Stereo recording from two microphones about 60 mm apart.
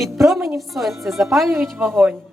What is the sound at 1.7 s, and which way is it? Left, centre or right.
Speech, right.